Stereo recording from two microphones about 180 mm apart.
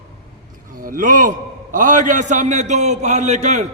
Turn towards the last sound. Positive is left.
turn(degrees=-40)  # may be behind; listen again after turning